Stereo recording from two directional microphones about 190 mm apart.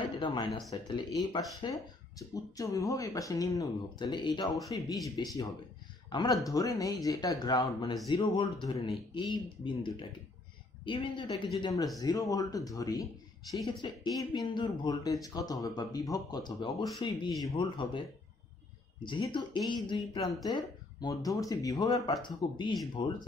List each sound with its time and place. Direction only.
0.0 s a sound: 25° left (ahead or behind)
0.7 s speech: 20° left (ahead or behind)
19.0 s speech: 25° left (ahead or behind)